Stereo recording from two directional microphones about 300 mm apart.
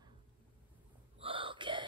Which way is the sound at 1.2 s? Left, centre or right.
Centre.